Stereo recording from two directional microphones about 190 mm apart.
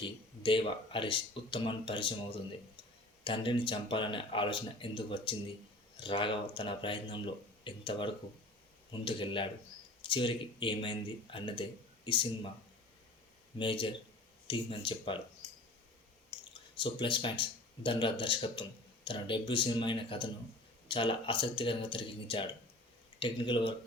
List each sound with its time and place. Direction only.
0.0 s speech: 25° left (ahead or behind)
3.2 s speech: 25° left (ahead or behind)
13.6 s speech: 25° left (ahead or behind)
16.7 s speech: 25° left (ahead or behind)